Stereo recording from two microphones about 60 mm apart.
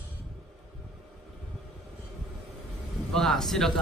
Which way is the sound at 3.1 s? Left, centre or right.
Centre.